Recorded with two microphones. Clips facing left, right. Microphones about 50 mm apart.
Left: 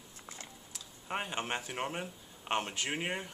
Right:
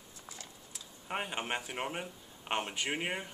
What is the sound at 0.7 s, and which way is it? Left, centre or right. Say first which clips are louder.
Speech: even; centre.